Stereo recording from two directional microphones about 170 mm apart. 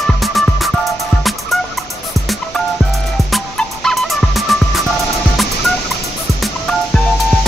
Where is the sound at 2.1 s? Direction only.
20° right (ahead or behind).